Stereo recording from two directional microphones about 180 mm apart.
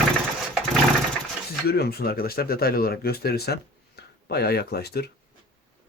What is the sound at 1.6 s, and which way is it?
Speech, 60° left (ahead or behind).